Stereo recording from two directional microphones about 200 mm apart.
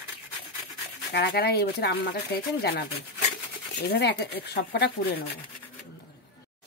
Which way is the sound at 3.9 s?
55° left (ahead or behind).